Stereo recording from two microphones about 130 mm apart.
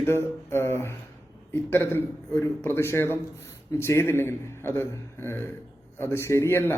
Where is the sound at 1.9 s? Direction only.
20° left (ahead or behind).